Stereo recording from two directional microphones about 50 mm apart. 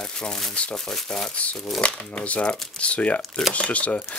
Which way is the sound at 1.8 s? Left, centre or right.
Left.